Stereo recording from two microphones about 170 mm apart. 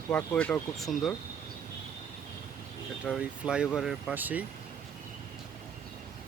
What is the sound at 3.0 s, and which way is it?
Speech, 5° right (ahead or behind).